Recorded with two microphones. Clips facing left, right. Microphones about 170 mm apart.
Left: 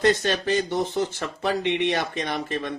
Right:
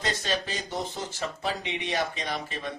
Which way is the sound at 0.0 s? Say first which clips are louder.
Left 9 dB; 60° left (ahead or behind).